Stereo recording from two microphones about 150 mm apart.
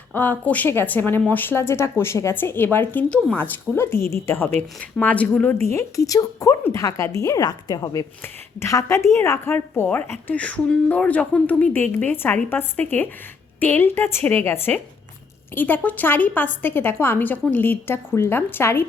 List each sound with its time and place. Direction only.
0.1 s a woman's voice: 10° left (ahead or behind)